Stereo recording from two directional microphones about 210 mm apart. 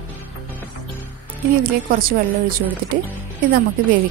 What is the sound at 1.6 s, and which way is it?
Speech, 45° right (ahead or behind).